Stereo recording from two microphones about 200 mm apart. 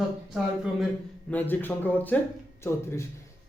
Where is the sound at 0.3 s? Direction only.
Centre (ahead or behind).